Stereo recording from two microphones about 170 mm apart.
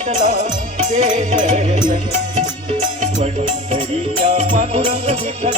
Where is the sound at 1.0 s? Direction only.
50° right (ahead or behind).